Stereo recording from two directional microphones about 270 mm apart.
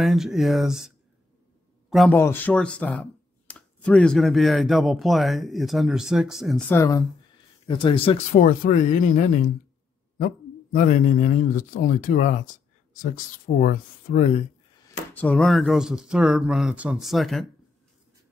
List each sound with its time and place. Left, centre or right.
0.0 s a man's voice: centre; by 14.4 s left
15.1 s speech: centre